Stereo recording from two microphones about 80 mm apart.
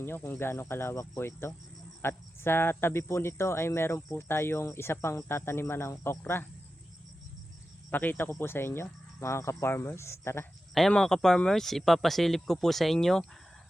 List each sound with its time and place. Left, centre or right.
0.0 s speech: left
7.9 s speech: left
10.8 s speech: centre